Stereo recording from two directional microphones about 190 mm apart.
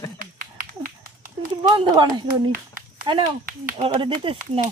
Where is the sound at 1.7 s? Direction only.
20° right (ahead or behind).